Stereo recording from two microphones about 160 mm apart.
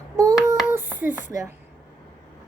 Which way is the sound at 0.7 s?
15° right (ahead or behind).